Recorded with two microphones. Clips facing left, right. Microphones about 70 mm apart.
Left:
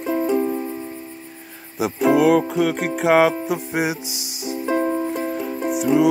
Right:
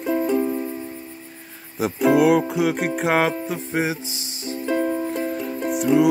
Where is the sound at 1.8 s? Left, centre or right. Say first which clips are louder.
Even; centre.